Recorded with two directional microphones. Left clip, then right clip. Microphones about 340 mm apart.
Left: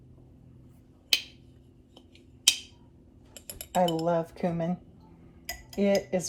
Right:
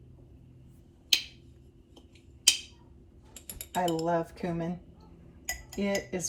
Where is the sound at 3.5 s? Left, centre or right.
Centre.